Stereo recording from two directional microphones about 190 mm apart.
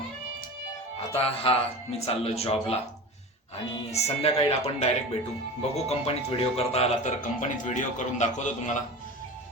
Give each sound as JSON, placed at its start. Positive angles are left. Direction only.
{"t": 1.1, "sound": "a man's voice", "side_deg": 30}
{"t": 3.9, "sound": "a man's voice", "side_deg": 35}